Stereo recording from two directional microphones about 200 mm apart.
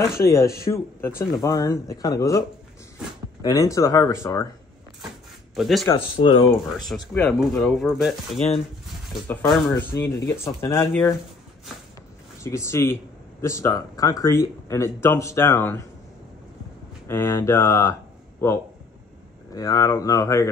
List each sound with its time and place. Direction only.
0.1 s speech: 15° left (ahead or behind)
3.4 s speech: 15° left (ahead or behind)
5.6 s speech: centre (ahead or behind)
5.9 s speech: 25° left (ahead or behind)
6.9 s speech: 5° left (ahead or behind)
12.4 s speech: 15° left (ahead or behind)
17.1 s speech: 10° left (ahead or behind)
19.5 s speech: 15° left (ahead or behind)